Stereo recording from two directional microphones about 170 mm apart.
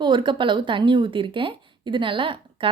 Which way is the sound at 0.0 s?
30° right (ahead or behind).